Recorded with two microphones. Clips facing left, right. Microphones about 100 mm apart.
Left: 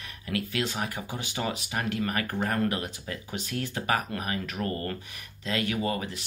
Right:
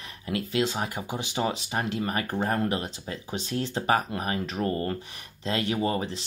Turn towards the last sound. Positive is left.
turn(degrees=-30)  # may be behind; listen again after turning